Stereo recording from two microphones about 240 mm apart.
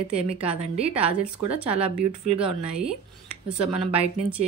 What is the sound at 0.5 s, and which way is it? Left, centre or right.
Speech, right.